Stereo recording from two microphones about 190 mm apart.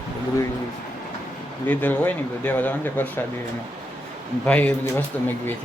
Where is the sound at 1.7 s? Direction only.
10° left (ahead or behind).